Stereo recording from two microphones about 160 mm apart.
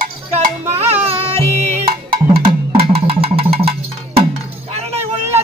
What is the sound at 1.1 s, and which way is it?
Music, 35° right (ahead or behind).